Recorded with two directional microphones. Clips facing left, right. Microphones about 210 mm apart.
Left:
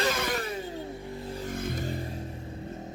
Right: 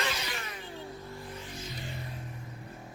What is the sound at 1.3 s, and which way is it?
Vehicle, 50° left (ahead or behind).